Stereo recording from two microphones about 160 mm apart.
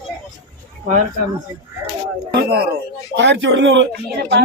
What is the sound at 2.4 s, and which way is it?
Speech, 80° right.